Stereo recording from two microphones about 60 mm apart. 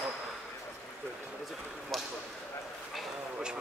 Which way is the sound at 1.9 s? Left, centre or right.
Centre.